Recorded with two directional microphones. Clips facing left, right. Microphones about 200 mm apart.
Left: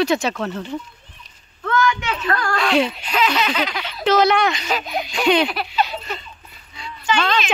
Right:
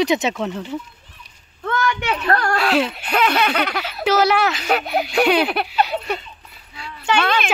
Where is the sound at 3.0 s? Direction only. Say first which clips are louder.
Right 2 dB; 60° right (ahead or behind).